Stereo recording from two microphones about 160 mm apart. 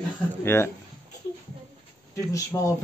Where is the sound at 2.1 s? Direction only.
20° left (ahead or behind).